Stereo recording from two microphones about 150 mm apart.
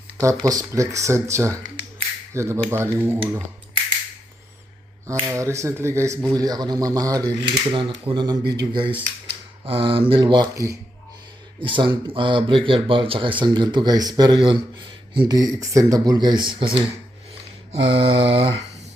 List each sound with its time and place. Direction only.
0.2 s speech: 20° right (ahead or behind)
5.2 s speech: 20° right (ahead or behind)
11.6 s speech: 35° right (ahead or behind)